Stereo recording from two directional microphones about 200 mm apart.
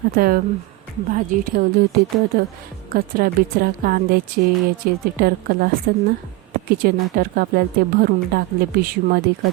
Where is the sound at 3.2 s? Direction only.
45° right (ahead or behind).